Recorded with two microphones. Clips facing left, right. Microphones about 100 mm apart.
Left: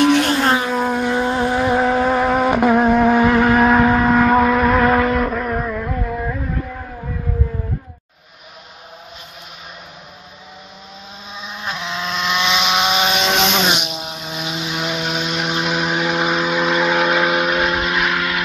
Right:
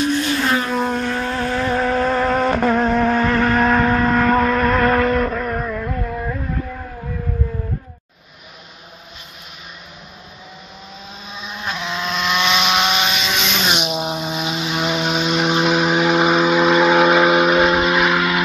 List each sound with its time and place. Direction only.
0.0 s vehicle: 75° left (ahead or behind)
0.6 s vehicle: 5° left (ahead or behind)
11.6 s a sound: 10° left (ahead or behind)
13.2 s vehicle: 55° left (ahead or behind)
14.1 s vehicle: 10° right (ahead or behind)